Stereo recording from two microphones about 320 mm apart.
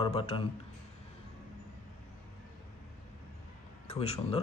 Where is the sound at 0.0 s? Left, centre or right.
Centre.